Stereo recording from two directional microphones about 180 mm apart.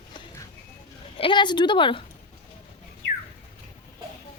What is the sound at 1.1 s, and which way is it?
Speech, 25° left (ahead or behind).